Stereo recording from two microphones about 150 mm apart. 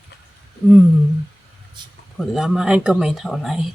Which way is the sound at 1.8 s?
30° right (ahead or behind).